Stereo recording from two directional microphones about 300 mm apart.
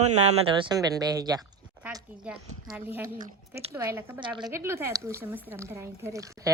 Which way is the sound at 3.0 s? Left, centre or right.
Right.